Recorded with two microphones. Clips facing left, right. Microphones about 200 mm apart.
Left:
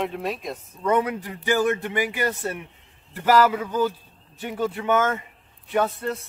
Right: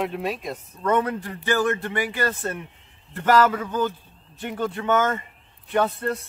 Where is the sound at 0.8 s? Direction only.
15° left (ahead or behind).